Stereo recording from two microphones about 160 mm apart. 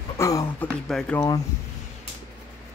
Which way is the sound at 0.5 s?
5° left (ahead or behind).